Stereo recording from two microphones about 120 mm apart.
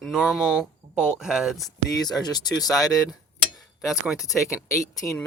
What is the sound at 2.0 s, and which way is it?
Speech, 35° left (ahead or behind).